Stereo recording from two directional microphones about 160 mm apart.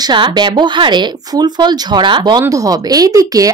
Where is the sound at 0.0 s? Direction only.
25° right (ahead or behind).